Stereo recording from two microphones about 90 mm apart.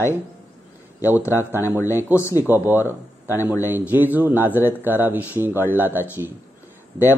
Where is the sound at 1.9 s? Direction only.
25° right (ahead or behind).